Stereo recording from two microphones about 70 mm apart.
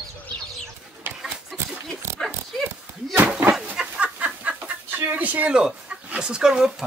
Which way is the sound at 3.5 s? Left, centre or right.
Centre.